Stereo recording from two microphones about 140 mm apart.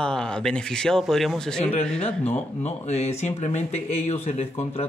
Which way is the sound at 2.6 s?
50° left (ahead or behind).